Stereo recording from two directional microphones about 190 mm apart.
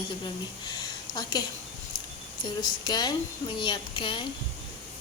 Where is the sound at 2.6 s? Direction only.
20° left (ahead or behind).